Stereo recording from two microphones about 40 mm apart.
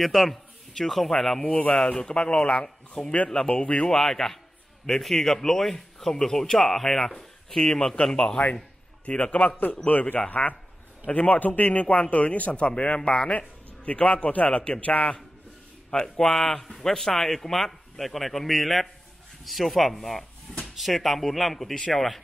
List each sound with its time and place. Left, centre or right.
0.0 s a man's voice: centre
1.5 s a man's voice: left
1.9 s speech: left
3.9 s speech: centre; by 9.6 s left
9.8 s a man's voice: left
15.9 s a man's voice: centre